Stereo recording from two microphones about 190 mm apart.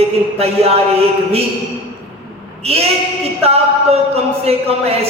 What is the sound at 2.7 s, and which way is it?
Speech, 30° right (ahead or behind).